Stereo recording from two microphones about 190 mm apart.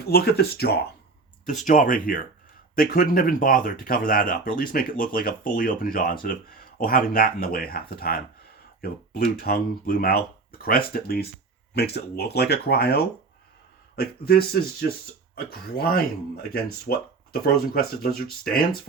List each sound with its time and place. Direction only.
0.0 s speech: 55° left (ahead or behind)
1.6 s speech: 40° left (ahead or behind)